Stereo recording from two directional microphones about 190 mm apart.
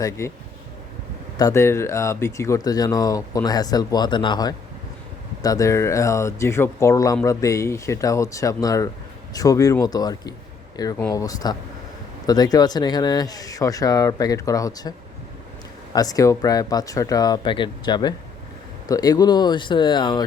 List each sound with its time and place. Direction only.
0.2 s speech: 15° left (ahead or behind)
1.4 s speech: 15° left (ahead or behind)